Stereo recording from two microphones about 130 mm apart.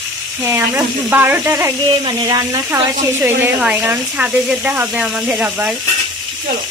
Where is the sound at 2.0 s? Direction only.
30° right (ahead or behind).